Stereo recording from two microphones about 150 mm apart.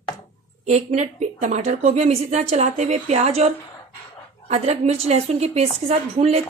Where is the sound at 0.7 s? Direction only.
50° right (ahead or behind).